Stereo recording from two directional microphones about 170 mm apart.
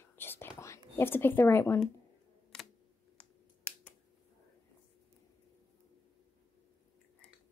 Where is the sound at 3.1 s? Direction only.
5° left (ahead or behind).